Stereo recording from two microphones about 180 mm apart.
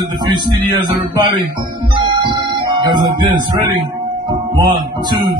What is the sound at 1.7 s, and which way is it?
Music, 25° right (ahead or behind).